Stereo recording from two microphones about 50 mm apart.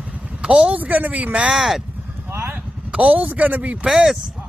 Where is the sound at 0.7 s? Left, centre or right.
Right.